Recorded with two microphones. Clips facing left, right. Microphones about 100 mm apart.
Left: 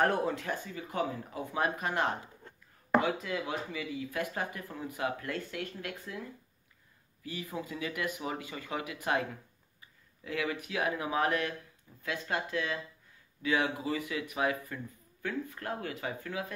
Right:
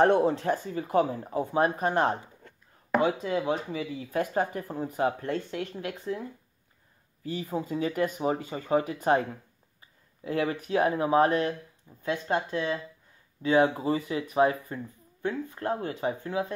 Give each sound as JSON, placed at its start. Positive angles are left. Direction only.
{"t": 0.0, "sound": "speech", "side_deg": -25}
{"t": 7.2, "sound": "speech", "side_deg": -40}